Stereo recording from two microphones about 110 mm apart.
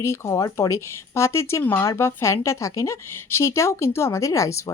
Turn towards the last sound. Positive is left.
turn(degrees=25)  # may be behind; listen again after turning